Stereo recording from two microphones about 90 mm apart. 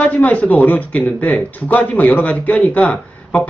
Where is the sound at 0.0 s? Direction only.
15° left (ahead or behind).